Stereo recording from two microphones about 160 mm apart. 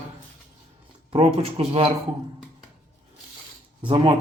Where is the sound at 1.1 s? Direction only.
35° right (ahead or behind).